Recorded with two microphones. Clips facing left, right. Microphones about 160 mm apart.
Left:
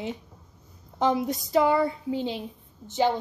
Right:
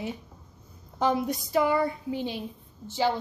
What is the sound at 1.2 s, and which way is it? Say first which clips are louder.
A woman's voice: left 2 dB; 20° left (ahead or behind).